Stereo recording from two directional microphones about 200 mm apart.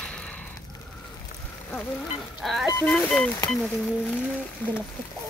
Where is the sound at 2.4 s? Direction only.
Centre (ahead or behind).